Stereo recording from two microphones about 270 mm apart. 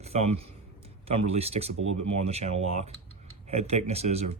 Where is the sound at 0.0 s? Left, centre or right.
Right.